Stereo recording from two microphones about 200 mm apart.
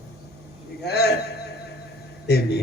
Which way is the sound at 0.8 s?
55° left (ahead or behind).